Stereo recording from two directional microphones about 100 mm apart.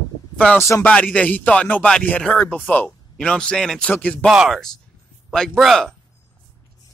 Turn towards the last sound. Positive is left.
turn(degrees=0)  # may be behind; listen again after turning